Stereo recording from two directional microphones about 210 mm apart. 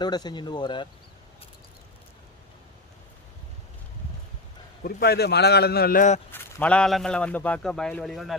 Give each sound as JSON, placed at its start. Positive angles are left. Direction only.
{"t": 0.0, "sound": "speech", "side_deg": 20}
{"t": 4.8, "sound": "a man's voice", "side_deg": 45}
{"t": 6.3, "sound": "a man's voice", "side_deg": 10}